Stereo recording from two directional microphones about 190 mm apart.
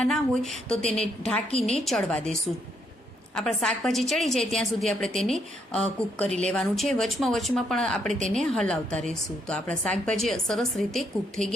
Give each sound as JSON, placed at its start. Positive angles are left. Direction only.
{"t": 0.0, "sound": "a woman's voice", "side_deg": 0}
{"t": 1.5, "sound": "a woman's voice", "side_deg": 30}
{"t": 1.8, "sound": "a woman's voice", "side_deg": 5}